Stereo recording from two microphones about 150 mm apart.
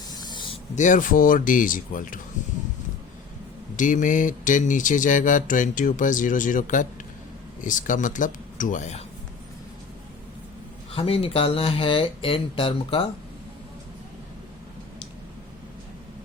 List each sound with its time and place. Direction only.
0.1 s spray: 30° left (ahead or behind)
0.8 s speech: 60° left (ahead or behind)
3.8 s speech: 60° left (ahead or behind)
10.9 s speech: 40° left (ahead or behind)